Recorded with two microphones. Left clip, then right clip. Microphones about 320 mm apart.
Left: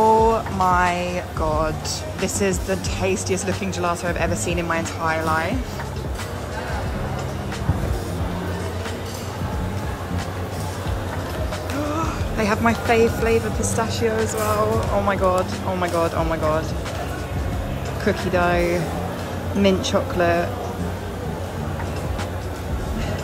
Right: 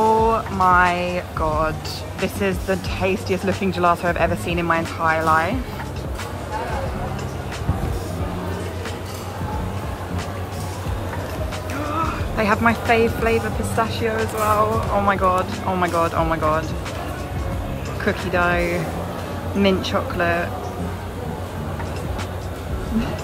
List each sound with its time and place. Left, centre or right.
0.0 s music: centre
2.1 s speech: centre
12.0 s speech: centre
18.0 s speech: centre